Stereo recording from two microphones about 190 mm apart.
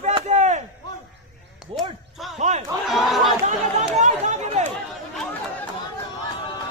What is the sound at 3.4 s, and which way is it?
Chatter, 35° right (ahead or behind).